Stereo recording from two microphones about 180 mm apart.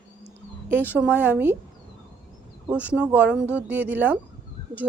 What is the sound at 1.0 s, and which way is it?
Speech, 10° right (ahead or behind).